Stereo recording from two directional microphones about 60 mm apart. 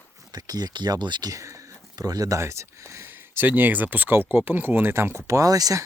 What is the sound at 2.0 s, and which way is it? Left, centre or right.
Speech, right.